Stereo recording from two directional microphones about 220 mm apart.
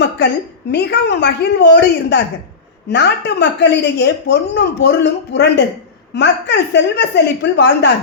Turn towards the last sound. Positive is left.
turn(degrees=50)  # may be behind; listen again after turning